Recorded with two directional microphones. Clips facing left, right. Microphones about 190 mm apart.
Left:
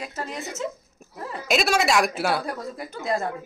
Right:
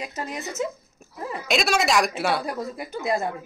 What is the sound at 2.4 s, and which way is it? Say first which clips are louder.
Speech: right 2 dB; 10° right (ahead or behind).